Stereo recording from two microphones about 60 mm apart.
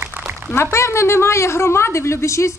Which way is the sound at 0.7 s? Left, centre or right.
Left.